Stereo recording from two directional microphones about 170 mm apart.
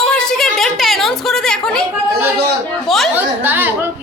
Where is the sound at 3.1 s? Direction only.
10° right (ahead or behind).